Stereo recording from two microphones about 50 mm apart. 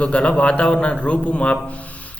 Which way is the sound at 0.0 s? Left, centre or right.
Left.